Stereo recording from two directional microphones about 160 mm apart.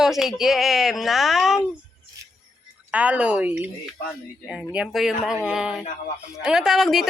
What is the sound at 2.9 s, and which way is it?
Speech, 10° right (ahead or behind).